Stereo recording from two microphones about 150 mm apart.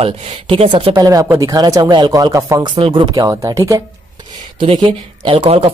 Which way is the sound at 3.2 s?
20° right (ahead or behind).